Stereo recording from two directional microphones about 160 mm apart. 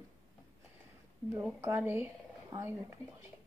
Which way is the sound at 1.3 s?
15° right (ahead or behind).